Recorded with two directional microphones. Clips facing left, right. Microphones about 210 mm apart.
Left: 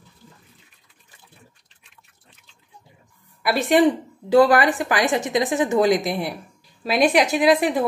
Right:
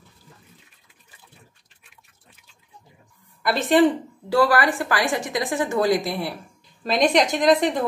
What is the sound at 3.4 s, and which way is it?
A woman's voice, 10° left (ahead or behind).